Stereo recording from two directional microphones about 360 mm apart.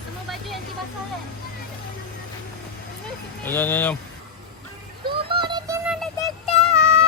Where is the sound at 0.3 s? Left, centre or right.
Centre.